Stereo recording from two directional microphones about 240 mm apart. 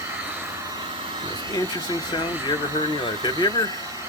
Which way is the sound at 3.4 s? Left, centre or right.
Centre.